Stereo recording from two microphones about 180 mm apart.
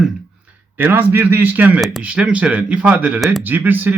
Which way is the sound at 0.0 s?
10° right (ahead or behind).